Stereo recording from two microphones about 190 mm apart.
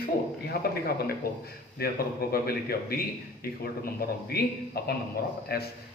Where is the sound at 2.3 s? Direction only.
50° left (ahead or behind).